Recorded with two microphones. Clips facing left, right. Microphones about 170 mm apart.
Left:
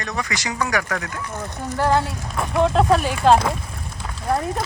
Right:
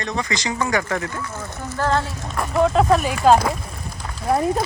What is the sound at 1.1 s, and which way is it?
Speech, 15° left (ahead or behind).